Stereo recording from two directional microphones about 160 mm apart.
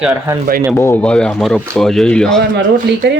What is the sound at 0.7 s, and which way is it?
Speech, 15° left (ahead or behind).